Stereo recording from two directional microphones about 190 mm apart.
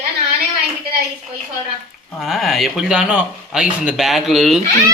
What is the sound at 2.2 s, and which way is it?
Speech, centre (ahead or behind).